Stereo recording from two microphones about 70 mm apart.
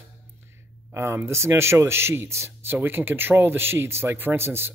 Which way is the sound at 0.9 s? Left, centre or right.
Right.